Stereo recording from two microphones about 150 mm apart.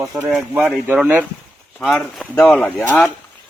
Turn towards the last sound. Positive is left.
turn(degrees=10)  # may be behind; listen again after turning